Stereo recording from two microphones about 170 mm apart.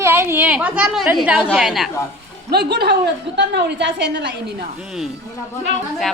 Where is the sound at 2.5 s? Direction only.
70° right (ahead or behind).